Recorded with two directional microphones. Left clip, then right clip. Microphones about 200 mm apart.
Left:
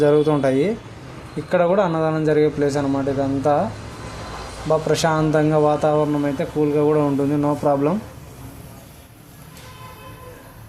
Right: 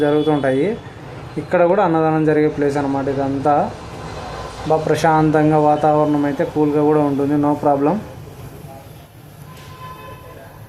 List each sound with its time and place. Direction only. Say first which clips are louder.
0.0 s speech: even; 40° left (ahead or behind)
1.5 s a man's voice: right 3 dB; 30° left (ahead or behind)
4.7 s speech: right 4 dB; 35° left (ahead or behind)